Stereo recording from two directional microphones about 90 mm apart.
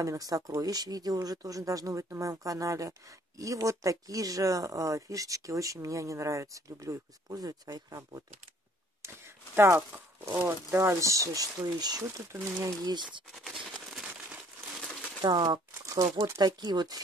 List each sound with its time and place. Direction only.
0.0 s speech: 40° right (ahead or behind)
9.6 s speech: 25° right (ahead or behind); by 12.1 s 45° right (ahead or behind)
12.3 s speech: 30° right (ahead or behind)
13.3 s a sound: centre (ahead or behind)
15.2 s speech: 55° right (ahead or behind)
15.8 s speech: 40° right (ahead or behind)